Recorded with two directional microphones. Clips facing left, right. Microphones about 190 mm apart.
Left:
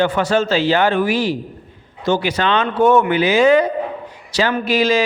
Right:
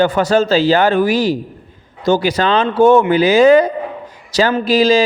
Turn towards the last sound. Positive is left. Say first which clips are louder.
# right 4 dB
turn(degrees=-35)  # may be behind; listen again after turning